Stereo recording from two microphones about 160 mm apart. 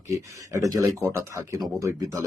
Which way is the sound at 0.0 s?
20° right (ahead or behind).